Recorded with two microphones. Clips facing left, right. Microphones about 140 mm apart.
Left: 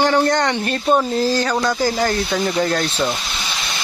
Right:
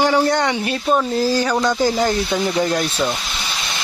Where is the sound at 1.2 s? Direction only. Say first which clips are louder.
Right 1 dB; 10° right (ahead or behind).